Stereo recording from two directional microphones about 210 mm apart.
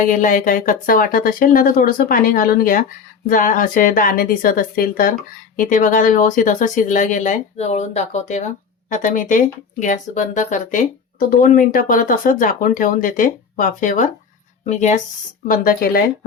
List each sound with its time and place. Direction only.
0.0 s speech: 40° left (ahead or behind)
15.4 s speech: 45° left (ahead or behind)